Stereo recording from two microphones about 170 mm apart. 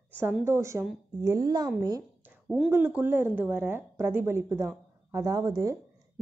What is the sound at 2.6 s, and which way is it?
A woman's voice, 10° right (ahead or behind).